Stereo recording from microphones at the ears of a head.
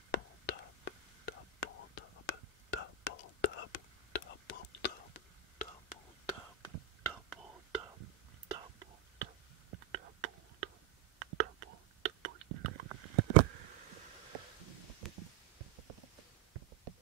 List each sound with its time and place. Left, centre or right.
0.1 s whispering: left
6.6 s whispering: right